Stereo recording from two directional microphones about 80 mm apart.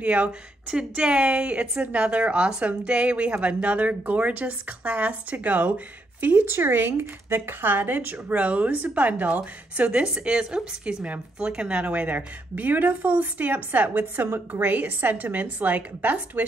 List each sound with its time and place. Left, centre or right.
0.0 s a woman's voice: centre